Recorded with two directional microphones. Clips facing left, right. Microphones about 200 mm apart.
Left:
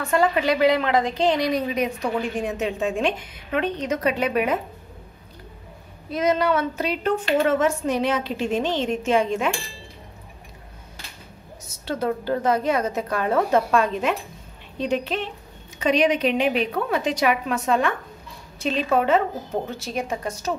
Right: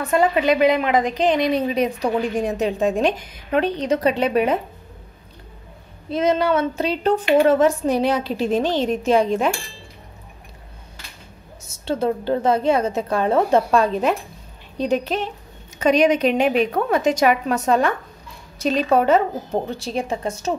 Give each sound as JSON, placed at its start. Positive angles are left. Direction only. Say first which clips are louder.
{"t": 0.0, "sound": "a woman's voice", "louder": "right 3 dB", "side_deg": -20}
{"t": 6.0, "sound": "a woman's voice", "louder": "right 2 dB", "side_deg": -25}
{"t": 11.6, "sound": "a woman's voice", "louder": "right 4 dB", "side_deg": -25}